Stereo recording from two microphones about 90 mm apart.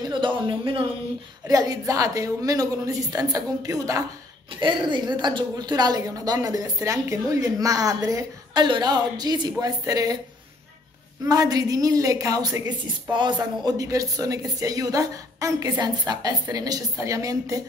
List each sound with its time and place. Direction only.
0.1 s speech: 65° right (ahead or behind)
1.5 s a woman's voice: 45° right (ahead or behind)
4.6 s a woman's voice: 60° right (ahead or behind); by 8.2 s 40° right (ahead or behind)
8.5 s speech: 55° right (ahead or behind)
11.2 s speech: 45° right (ahead or behind)
13.1 s speech: 55° right (ahead or behind); by 17.6 s 40° right (ahead or behind)